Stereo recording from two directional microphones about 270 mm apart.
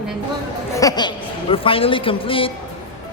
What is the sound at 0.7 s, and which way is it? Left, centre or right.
A man's voice, centre.